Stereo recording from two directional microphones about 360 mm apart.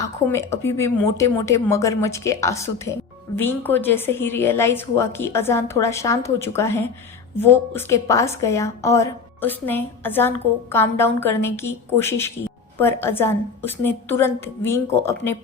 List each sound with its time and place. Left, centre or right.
0.3 s speech: centre